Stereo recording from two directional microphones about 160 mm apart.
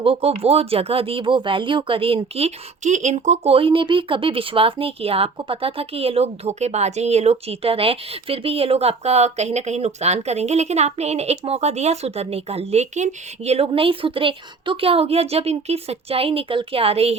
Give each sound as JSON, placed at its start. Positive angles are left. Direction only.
{"t": 0.0, "sound": "speech", "side_deg": -35}